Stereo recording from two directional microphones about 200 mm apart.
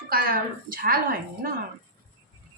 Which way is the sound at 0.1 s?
45° right (ahead or behind).